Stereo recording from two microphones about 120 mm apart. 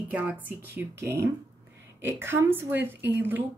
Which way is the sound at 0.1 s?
15° right (ahead or behind).